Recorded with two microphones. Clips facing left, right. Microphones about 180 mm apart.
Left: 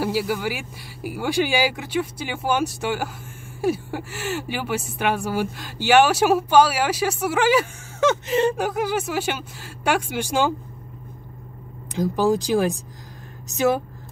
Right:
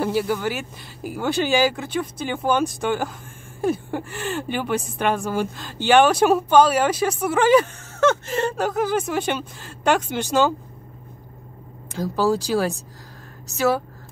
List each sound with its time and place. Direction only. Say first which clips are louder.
0.0 s speech: right 1 dB; 10° left (ahead or behind)
11.9 s speech: left 1 dB; 15° left (ahead or behind)